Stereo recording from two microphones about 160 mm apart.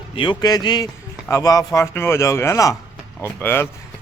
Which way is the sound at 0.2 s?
25° left (ahead or behind).